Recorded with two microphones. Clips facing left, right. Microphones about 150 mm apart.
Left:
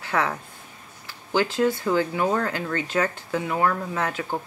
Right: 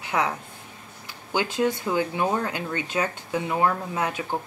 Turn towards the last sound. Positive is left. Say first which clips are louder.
# left 1 dB
turn(degrees=-15)  # may be behind; listen again after turning